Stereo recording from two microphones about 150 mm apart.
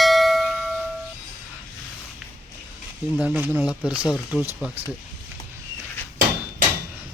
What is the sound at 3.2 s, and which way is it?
Speech, 10° right (ahead or behind).